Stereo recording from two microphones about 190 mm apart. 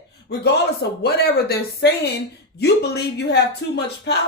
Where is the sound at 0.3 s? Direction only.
60° left (ahead or behind).